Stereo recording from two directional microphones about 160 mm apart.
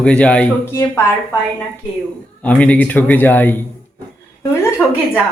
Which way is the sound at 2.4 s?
10° left (ahead or behind).